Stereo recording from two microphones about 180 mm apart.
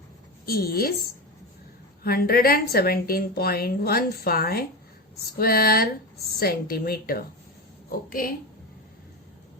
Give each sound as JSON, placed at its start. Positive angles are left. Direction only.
{"t": 0.4, "sound": "a woman's voice", "side_deg": 55}
{"t": 2.0, "sound": "a woman's voice", "side_deg": 55}